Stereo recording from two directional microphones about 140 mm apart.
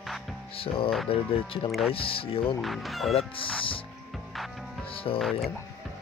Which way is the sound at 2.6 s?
Centre (ahead or behind).